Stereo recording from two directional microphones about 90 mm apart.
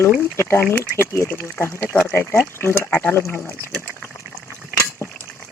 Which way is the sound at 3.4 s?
10° left (ahead or behind).